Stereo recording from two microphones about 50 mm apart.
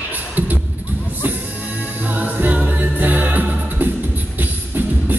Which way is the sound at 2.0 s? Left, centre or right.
Right.